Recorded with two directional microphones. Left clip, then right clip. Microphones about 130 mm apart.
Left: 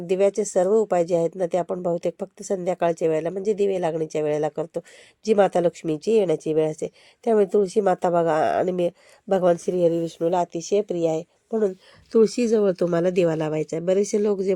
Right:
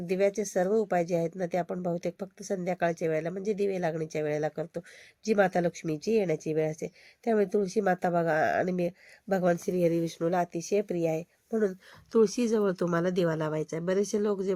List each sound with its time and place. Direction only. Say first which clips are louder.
0.1 s speech: left 7 dB; 20° left (ahead or behind)
9.9 s speech: left 5 dB; 20° right (ahead or behind)
10.2 s speech: left 7 dB; 15° left (ahead or behind)
12.1 s speech: left 6 dB; 30° left (ahead or behind)
13.1 s speech: left 7 dB; 50° left (ahead or behind)